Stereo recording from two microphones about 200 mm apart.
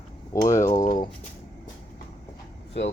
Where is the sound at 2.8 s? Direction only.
65° left (ahead or behind).